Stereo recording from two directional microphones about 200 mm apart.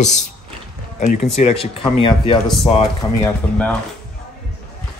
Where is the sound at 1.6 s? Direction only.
25° left (ahead or behind).